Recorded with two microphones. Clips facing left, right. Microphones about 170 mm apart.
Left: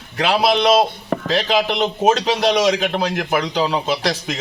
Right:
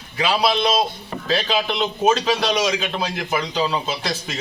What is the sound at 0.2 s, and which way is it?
A man's voice, 70° left (ahead or behind).